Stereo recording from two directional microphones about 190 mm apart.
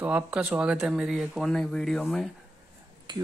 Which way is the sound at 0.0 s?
5° right (ahead or behind).